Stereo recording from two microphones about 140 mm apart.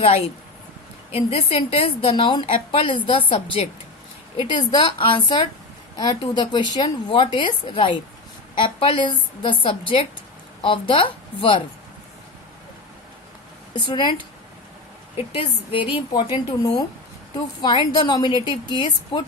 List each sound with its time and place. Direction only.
0.0 s a woman's voice: 45° left (ahead or behind)
13.8 s speech: 35° left (ahead or behind)